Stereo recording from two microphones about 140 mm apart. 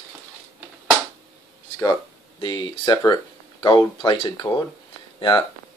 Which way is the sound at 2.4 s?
35° left (ahead or behind).